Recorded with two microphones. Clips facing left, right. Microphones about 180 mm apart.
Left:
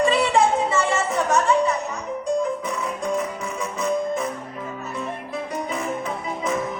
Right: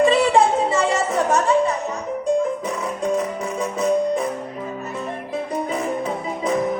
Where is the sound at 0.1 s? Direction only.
30° right (ahead or behind).